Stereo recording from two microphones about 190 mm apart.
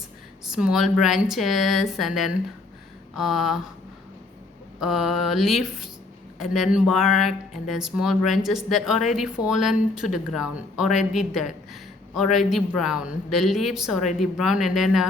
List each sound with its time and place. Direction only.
0.4 s speech: 5° right (ahead or behind)
4.8 s speech: centre (ahead or behind)